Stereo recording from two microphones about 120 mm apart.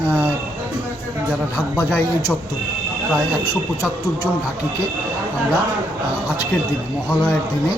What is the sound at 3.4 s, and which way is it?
Speech, 30° left (ahead or behind).